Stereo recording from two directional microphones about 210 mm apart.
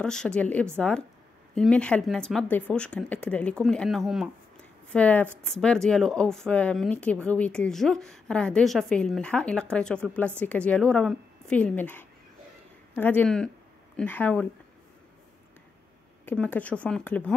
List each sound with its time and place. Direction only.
0.0 s a woman's voice: 5° left (ahead or behind)
16.3 s a woman's voice: 5° left (ahead or behind)